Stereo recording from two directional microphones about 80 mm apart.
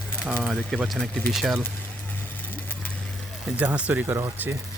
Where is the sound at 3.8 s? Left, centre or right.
Centre.